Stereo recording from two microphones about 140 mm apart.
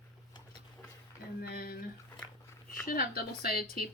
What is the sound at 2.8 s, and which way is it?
Speech, 90° left.